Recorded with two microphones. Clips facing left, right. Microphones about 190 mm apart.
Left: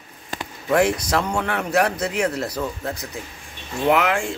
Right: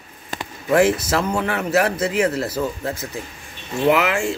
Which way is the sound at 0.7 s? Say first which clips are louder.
Right 2 dB; 5° right (ahead or behind).